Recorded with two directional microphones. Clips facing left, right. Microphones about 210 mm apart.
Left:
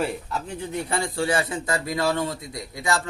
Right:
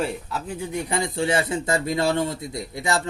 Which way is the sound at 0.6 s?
15° right (ahead or behind).